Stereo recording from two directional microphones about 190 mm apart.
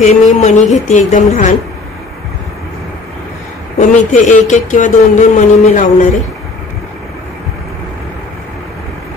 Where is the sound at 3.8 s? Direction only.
40° left (ahead or behind).